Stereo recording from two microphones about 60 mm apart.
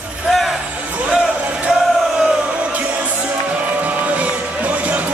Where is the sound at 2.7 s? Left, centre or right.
Right.